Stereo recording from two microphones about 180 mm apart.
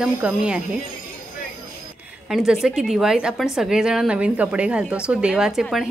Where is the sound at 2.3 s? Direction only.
5° right (ahead or behind).